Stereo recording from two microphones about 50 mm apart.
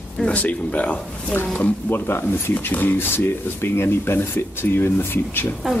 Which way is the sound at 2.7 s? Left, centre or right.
Left.